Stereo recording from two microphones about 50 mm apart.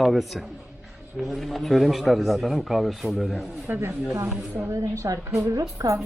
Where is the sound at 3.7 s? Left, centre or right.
Right.